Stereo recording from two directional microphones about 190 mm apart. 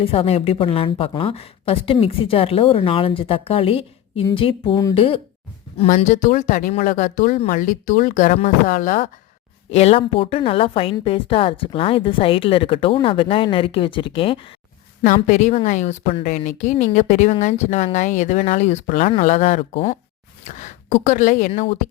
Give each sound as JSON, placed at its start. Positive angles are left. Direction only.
{"t": 0.0, "sound": "speech", "side_deg": 30}
{"t": 9.6, "sound": "speech", "side_deg": 35}
{"t": 15.0, "sound": "a woman's voice", "side_deg": 40}
{"t": 20.4, "sound": "speech", "side_deg": 40}